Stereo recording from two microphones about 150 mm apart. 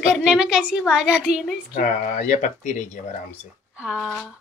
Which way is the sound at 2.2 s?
55° left (ahead or behind).